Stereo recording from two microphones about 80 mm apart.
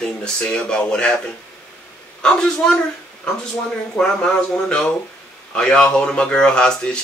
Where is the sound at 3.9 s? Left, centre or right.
Centre.